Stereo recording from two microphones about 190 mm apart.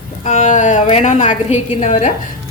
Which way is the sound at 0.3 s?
40° left (ahead or behind).